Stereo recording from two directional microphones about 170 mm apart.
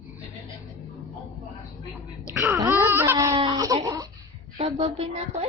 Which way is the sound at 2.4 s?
10° right (ahead or behind).